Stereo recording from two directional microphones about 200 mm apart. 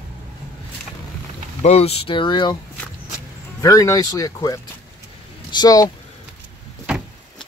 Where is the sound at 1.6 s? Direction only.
30° left (ahead or behind).